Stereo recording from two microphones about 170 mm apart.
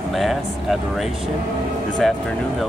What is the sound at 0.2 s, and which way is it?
Speech, centre (ahead or behind).